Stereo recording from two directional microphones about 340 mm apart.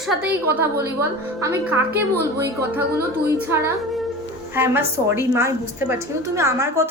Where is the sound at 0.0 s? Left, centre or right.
Centre.